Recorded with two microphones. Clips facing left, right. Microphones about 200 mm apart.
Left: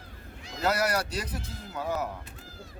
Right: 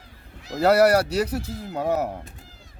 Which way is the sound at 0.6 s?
65° right (ahead or behind).